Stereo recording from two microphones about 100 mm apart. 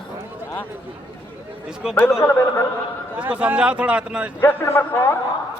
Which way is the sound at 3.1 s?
15° right (ahead or behind).